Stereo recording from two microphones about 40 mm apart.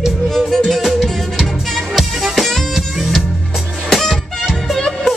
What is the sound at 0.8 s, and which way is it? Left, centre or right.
Music, centre.